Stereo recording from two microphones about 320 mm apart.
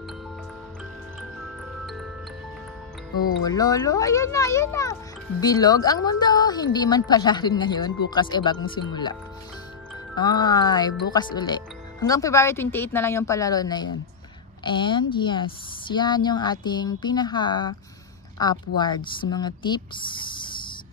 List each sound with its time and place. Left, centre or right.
3.4 s speech: centre
10.1 s speech: centre